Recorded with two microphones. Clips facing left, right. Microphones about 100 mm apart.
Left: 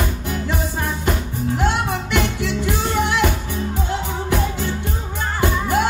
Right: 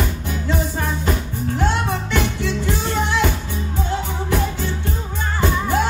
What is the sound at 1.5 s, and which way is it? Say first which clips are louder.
Music: even; 15° left (ahead or behind).